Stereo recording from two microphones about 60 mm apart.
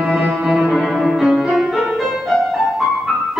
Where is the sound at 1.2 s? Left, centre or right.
Centre.